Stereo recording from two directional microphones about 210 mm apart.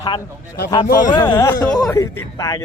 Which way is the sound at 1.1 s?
20° left (ahead or behind).